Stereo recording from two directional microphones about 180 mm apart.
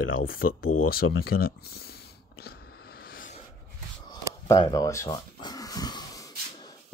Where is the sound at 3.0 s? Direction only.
50° left (ahead or behind).